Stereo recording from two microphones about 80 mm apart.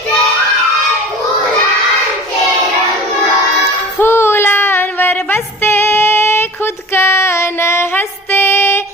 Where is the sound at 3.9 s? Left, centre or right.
Left.